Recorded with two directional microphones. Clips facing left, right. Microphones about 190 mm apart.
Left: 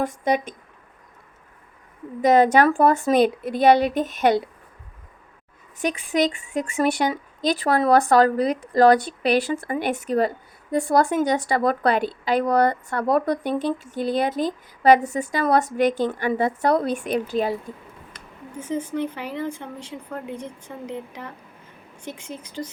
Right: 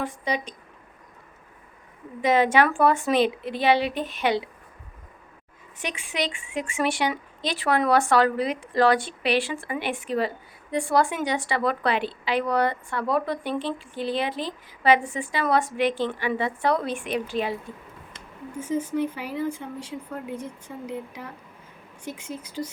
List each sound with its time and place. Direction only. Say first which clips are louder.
0.0 s a woman's voice: left 6 dB; 45° left (ahead or behind)
2.2 s a woman's voice: left 4 dB; 40° left (ahead or behind)
5.8 s speech: left 8 dB; 40° left (ahead or behind)
18.7 s speech: even; 5° right (ahead or behind)